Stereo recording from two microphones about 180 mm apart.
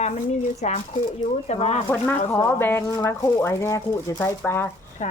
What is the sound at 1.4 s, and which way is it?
Speech, 35° left (ahead or behind).